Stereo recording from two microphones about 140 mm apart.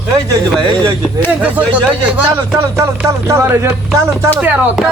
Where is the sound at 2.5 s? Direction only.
20° right (ahead or behind).